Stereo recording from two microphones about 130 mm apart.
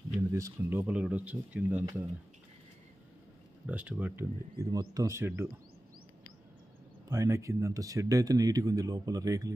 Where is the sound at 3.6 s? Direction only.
10° right (ahead or behind).